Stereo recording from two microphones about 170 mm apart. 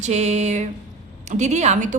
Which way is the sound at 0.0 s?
40° right (ahead or behind).